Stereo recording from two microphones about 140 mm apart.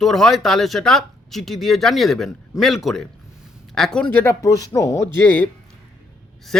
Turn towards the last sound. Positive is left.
turn(degrees=5)  # may be behind; listen again after turning